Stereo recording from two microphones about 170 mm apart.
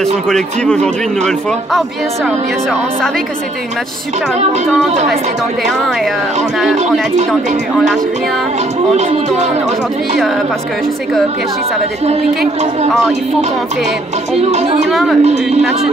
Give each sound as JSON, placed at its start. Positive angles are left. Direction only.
{"t": 14.5, "sound": "speech", "side_deg": -40}
{"t": 14.9, "sound": "speech", "side_deg": 0}